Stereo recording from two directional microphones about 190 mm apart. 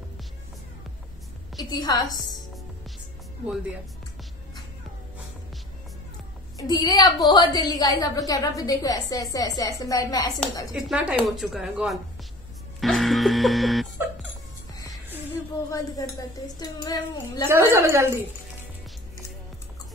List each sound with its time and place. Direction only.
1.6 s a woman's voice: 20° left (ahead or behind)
6.7 s a woman's voice: 20° left (ahead or behind)
10.7 s speech: 5° right (ahead or behind)
12.8 s music: centre (ahead or behind)
15.7 s a woman's voice: 20° left (ahead or behind)
17.5 s a woman's voice: 15° right (ahead or behind)